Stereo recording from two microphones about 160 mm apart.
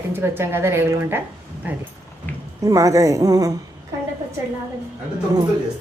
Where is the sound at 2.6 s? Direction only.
20° right (ahead or behind).